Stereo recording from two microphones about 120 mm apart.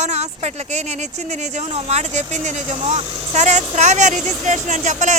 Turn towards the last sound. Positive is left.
turn(degrees=-90)